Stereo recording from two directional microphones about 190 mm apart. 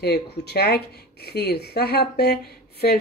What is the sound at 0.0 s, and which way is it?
Speech, 60° left (ahead or behind).